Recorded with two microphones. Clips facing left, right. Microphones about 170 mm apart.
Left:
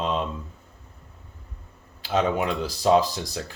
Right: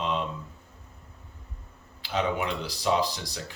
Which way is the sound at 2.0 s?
45° left (ahead or behind).